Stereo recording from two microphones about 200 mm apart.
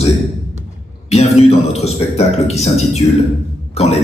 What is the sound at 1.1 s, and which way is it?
Speech, 30° left (ahead or behind).